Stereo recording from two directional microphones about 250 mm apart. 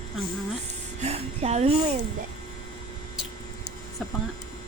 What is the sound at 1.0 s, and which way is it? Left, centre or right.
Speech, right.